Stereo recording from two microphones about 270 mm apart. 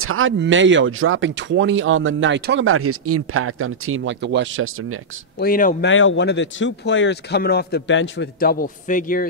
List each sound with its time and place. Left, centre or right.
0.0 s speech: right
5.4 s speech: left
5.9 s speech: left